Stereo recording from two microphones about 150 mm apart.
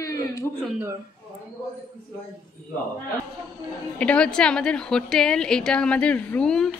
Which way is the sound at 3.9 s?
10° left (ahead or behind).